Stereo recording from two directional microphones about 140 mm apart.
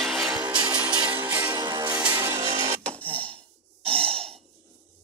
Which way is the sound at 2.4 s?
50° right (ahead or behind).